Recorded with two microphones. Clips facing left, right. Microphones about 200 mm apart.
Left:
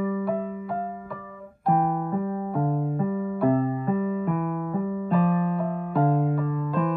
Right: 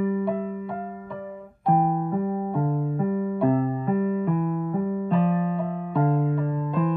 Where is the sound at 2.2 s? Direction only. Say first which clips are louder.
Right 2 dB; 15° right (ahead or behind).